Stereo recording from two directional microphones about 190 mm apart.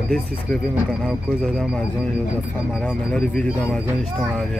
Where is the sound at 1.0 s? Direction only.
Centre (ahead or behind).